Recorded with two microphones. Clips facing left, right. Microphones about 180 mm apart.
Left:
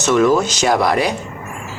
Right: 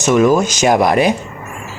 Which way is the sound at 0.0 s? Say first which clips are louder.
Right 2 dB; 15° right (ahead or behind).